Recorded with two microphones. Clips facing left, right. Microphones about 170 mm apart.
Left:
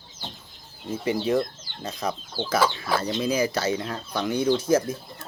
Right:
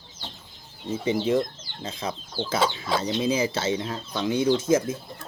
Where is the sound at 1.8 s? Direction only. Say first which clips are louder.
Left 2 dB; 60° left (ahead or behind).